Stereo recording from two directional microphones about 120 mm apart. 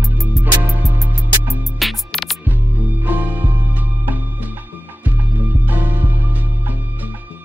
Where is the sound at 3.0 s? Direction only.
15° right (ahead or behind).